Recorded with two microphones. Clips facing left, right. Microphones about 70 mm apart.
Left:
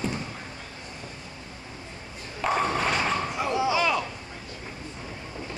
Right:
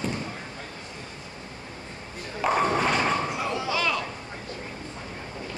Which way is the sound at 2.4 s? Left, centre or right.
Centre.